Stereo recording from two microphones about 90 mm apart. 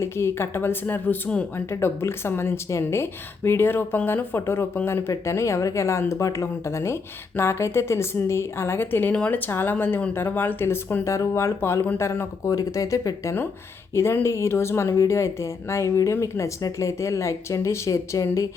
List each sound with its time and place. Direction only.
0.0 s speech: 30° left (ahead or behind)
1.7 s speech: 30° left (ahead or behind)